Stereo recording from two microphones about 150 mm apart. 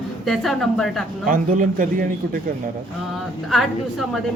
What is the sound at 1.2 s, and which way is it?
Speech, 65° right (ahead or behind).